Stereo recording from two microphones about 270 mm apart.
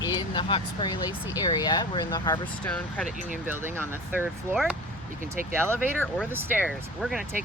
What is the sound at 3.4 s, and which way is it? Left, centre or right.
Speech, centre.